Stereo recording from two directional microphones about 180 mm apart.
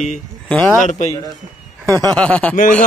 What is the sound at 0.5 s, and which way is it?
Speech, 5° left (ahead or behind).